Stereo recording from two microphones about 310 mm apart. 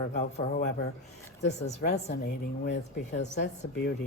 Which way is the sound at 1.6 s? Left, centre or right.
Left.